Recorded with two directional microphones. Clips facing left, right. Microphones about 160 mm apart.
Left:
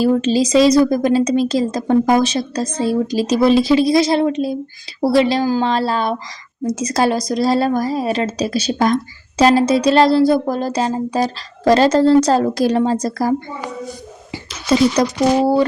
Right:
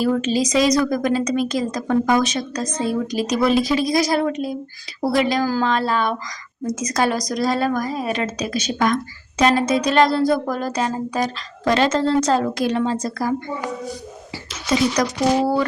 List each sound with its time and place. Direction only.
0.0 s a woman's voice: 30° left (ahead or behind)
14.7 s speech: 25° left (ahead or behind)